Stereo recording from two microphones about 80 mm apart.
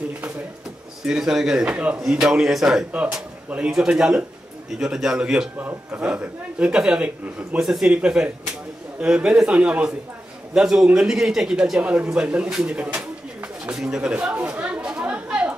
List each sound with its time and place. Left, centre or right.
1.0 s speech: centre
2.9 s speech: centre
5.6 s a man's voice: right; by 11.8 s centre
11.8 s pigeon: centre